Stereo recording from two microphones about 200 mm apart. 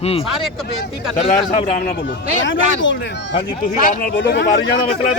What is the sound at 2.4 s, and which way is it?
Speech, 70° left (ahead or behind).